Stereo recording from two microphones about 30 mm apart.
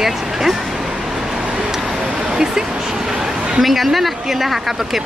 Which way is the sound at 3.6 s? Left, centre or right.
Centre.